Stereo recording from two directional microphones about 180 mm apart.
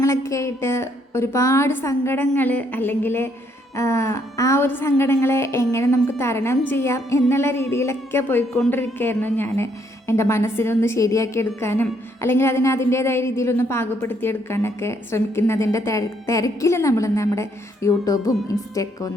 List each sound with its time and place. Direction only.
0.0 s a woman's voice: 15° left (ahead or behind)